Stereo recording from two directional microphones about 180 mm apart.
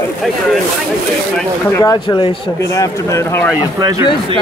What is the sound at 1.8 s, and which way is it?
Speech, 20° left (ahead or behind).